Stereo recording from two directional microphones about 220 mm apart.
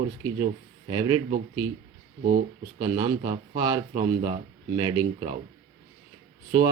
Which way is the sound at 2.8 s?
20° right (ahead or behind).